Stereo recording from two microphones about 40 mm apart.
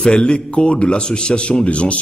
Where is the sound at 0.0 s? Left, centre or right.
Left.